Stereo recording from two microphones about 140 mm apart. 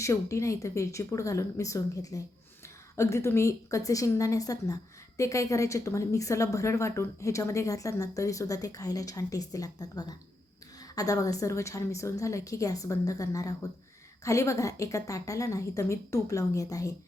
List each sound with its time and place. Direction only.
0.0 s a woman's voice: 20° left (ahead or behind)